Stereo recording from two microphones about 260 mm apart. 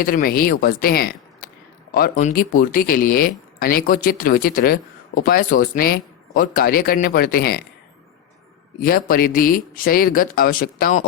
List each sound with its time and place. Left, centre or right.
0.0 s speech: left
8.8 s speech: left